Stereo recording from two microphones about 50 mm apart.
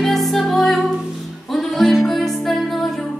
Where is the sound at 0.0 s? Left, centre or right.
Centre.